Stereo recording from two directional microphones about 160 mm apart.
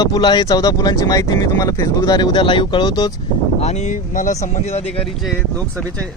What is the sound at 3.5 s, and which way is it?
Speech, 45° left (ahead or behind).